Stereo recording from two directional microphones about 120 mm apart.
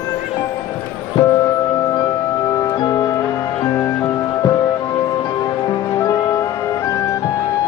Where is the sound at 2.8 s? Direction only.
35° left (ahead or behind).